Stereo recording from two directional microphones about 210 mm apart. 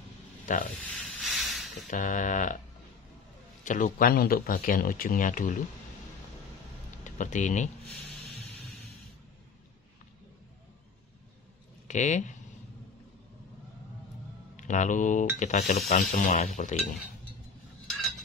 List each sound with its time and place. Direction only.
0.8 s a sound: centre (ahead or behind)
1.9 s speech: 35° left (ahead or behind)
3.6 s speech: 35° left (ahead or behind)
7.1 s speech: 35° left (ahead or behind)
7.8 s a sound: centre (ahead or behind)
11.9 s speech: 35° left (ahead or behind)
14.6 s speech: 35° left (ahead or behind)